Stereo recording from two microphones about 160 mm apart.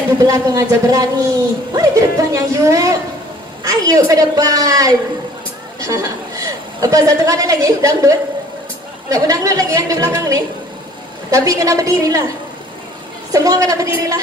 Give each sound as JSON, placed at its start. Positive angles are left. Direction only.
{"t": 0.3, "sound": "a woman's voice", "side_deg": -20}
{"t": 13.3, "sound": "a woman's voice", "side_deg": -20}